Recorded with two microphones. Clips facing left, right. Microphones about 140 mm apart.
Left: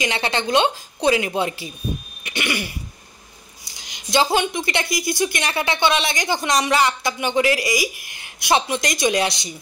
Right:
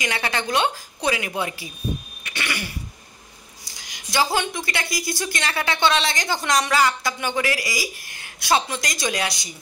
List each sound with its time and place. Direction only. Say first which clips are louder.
0.0 s a woman's voice: left 3 dB; 25° left (ahead or behind)
2.2 s cough: left 5 dB; 20° left (ahead or behind)
3.8 s a woman's voice: left 3 dB; 20° left (ahead or behind)